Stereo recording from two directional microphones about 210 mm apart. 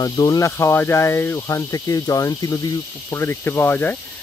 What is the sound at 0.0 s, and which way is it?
Speech, 15° left (ahead or behind).